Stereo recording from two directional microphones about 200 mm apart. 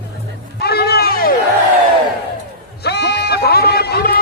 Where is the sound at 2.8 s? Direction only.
55° left (ahead or behind).